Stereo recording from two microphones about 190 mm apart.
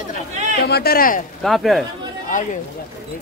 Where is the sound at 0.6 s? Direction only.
55° left (ahead or behind).